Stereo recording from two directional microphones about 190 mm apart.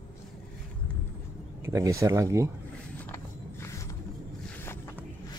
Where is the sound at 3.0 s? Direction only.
15° left (ahead or behind).